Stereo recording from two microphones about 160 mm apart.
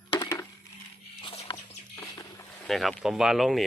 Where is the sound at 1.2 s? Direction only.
35° left (ahead or behind).